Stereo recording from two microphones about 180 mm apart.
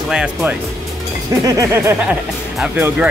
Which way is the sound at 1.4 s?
20° right (ahead or behind).